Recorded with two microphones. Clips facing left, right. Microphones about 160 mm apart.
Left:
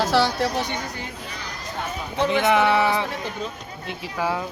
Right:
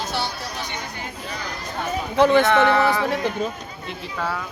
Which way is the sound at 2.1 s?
75° right (ahead or behind).